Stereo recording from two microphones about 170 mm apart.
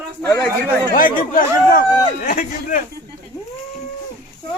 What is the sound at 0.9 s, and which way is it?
Speech, 55° left (ahead or behind).